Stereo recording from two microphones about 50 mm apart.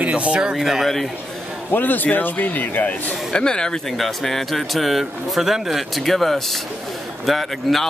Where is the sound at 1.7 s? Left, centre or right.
Left.